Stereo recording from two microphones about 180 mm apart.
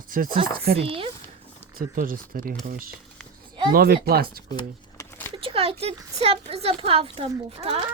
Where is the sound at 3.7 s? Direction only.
55° right (ahead or behind).